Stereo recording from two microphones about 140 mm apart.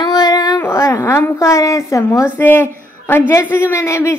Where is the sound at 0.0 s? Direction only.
30° left (ahead or behind).